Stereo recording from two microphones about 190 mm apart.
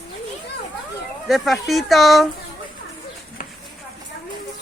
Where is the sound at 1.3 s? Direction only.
Centre (ahead or behind).